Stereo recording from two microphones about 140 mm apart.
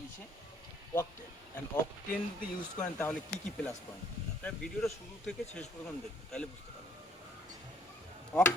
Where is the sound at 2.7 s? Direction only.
10° left (ahead or behind).